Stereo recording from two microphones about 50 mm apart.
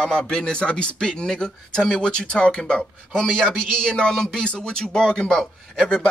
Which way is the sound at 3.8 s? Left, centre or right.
Centre.